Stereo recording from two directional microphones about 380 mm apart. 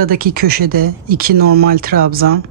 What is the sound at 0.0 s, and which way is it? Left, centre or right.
Speech, right.